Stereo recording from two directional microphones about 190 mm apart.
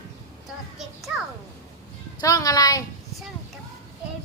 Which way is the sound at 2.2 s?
20° left (ahead or behind).